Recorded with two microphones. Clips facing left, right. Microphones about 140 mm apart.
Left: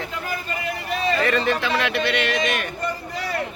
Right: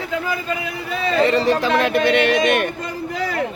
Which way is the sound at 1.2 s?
30° right (ahead or behind).